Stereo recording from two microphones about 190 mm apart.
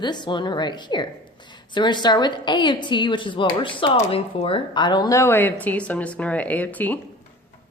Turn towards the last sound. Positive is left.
turn(degrees=10)  # may be behind; listen again after turning